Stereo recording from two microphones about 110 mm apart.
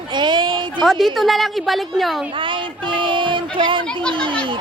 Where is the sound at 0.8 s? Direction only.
Centre (ahead or behind).